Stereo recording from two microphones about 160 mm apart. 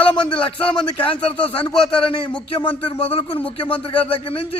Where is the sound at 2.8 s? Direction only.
35° left (ahead or behind).